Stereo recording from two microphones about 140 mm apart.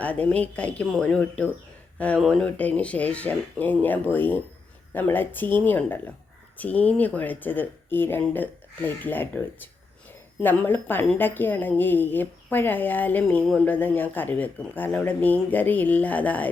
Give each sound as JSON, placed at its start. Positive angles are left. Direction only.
{"t": 0.0, "sound": "speech", "side_deg": 10}